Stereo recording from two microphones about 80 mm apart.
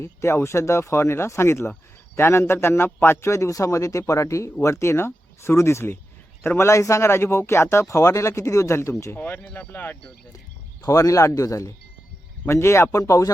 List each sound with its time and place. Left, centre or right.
0.0 s speech: left
9.1 s speech: left
10.8 s speech: left